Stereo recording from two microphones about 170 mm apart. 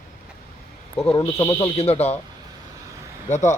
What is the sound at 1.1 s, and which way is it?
Speech, 30° left (ahead or behind).